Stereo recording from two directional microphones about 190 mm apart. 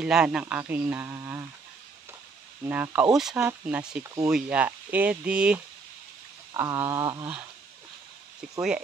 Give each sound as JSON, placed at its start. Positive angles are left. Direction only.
{"t": 0.0, "sound": "speech", "side_deg": -5}
{"t": 2.6, "sound": "speech", "side_deg": -10}
{"t": 4.0, "sound": "speech", "side_deg": -15}
{"t": 6.5, "sound": "speech", "side_deg": -15}